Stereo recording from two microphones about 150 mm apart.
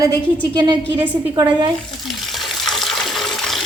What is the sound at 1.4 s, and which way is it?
Speech, 30° right (ahead or behind).